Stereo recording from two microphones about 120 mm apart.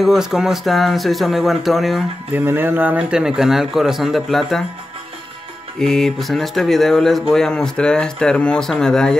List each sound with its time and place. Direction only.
0.0 s speech: 5° right (ahead or behind)
2.3 s speech: 15° right (ahead or behind); by 4.6 s centre (ahead or behind)
5.8 s speech: 5° left (ahead or behind)